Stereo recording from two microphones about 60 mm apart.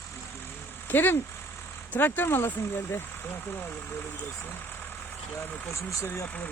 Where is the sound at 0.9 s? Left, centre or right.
Left.